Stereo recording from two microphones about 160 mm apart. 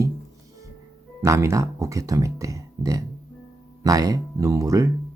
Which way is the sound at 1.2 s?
20° right (ahead or behind).